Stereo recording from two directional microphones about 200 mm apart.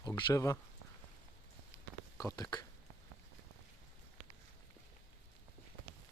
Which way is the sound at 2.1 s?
15° left (ahead or behind).